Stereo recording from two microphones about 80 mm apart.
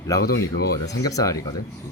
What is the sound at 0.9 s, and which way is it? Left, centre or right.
Speech, left.